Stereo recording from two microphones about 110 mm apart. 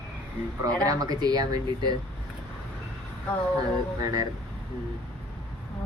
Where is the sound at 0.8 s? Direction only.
35° right (ahead or behind).